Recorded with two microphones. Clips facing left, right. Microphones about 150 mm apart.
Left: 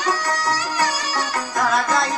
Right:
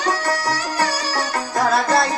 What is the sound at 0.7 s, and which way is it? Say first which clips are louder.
Music: right 1 dB; 35° right (ahead or behind).